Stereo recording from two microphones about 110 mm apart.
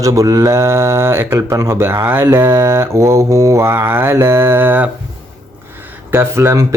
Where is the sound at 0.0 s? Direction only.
30° right (ahead or behind).